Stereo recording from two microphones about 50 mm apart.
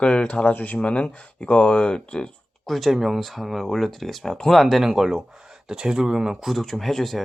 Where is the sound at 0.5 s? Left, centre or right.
Left; by 2.3 s centre.